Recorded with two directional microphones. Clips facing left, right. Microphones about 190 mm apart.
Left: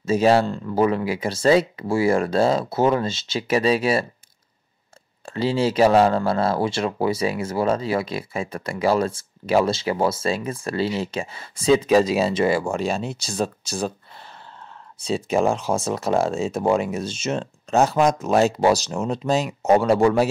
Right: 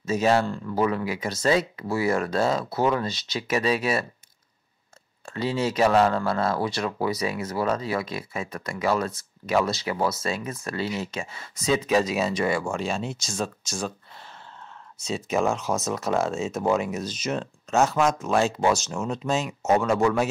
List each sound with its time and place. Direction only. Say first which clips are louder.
0.0 s speech: left 5 dB; 30° left (ahead or behind)
5.2 s speech: left 5 dB; 30° left (ahead or behind)
15.0 s speech: left 4 dB; 30° left (ahead or behind)